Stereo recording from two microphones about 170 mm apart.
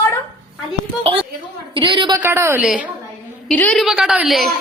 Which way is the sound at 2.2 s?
15° right (ahead or behind).